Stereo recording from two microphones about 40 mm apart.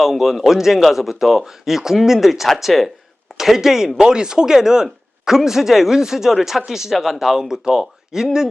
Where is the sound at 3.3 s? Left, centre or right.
Centre.